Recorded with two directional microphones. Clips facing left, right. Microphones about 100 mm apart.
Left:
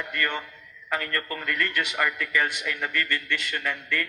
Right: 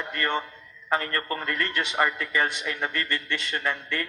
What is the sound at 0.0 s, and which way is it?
A man's voice, 30° right (ahead or behind).